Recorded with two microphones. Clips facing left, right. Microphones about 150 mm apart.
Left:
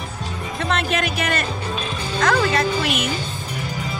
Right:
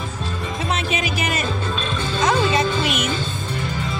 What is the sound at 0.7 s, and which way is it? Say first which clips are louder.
Music: left 3 dB; centre (ahead or behind).